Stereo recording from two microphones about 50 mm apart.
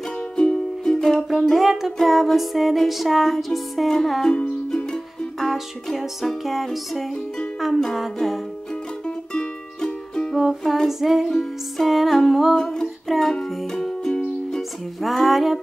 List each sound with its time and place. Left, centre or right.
0.4 s music: centre
1.4 s music: centre
5.4 s music: centre
9.0 s music: centre
10.3 s music: centre
10.6 s music: centre
10.9 s music: centre
12.5 s music: centre
15.0 s music: centre